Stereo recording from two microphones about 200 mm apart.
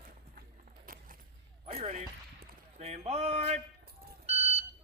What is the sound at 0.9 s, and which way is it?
Keys jangling, 45° right (ahead or behind).